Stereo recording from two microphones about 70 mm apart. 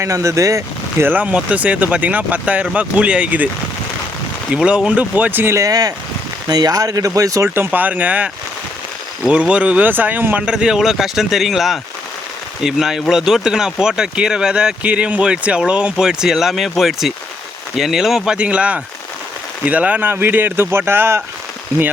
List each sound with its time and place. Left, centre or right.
0.0 s speech: right
1.0 s speech: right
4.5 s speech: centre
5.5 s speech: right
7.4 s speech: right
9.3 s speech: centre
10.4 s a man's voice: centre
18.3 s speech: centre; by 21.2 s right